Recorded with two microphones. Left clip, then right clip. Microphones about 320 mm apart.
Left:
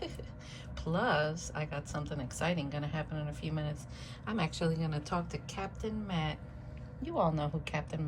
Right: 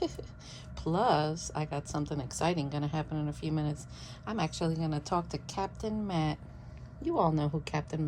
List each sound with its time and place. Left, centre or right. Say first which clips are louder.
0.9 s a woman's voice: right 3 dB; centre